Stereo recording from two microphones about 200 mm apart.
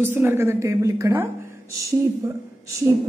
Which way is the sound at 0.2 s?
10° right (ahead or behind).